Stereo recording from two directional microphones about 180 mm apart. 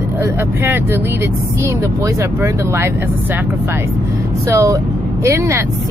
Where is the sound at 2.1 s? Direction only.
15° right (ahead or behind).